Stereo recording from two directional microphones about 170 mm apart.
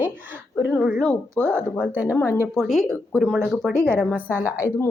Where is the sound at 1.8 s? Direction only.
10° right (ahead or behind).